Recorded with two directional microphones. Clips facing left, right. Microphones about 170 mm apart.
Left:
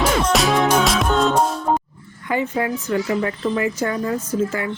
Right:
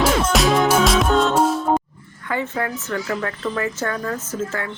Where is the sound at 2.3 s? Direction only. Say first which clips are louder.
Left 3 dB; 15° left (ahead or behind).